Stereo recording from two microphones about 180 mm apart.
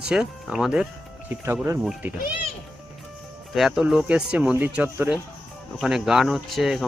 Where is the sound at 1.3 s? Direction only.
15° right (ahead or behind).